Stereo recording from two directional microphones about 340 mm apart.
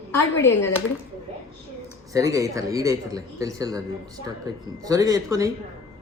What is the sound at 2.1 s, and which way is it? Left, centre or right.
A man's voice, centre.